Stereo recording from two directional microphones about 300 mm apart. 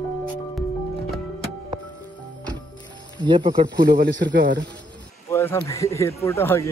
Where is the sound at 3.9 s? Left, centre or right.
Right.